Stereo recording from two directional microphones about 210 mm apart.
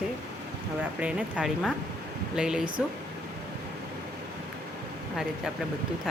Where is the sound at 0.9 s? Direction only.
5° right (ahead or behind).